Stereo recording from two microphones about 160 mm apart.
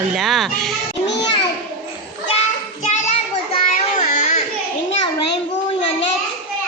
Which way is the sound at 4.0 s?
45° left (ahead or behind).